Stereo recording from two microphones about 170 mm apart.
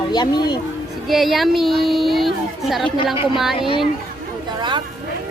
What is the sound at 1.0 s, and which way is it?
A woman's voice, centre (ahead or behind).